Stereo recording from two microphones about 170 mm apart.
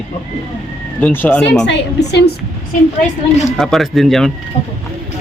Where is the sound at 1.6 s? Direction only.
90° left.